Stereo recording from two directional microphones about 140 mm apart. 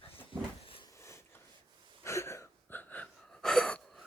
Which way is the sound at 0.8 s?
20° left (ahead or behind).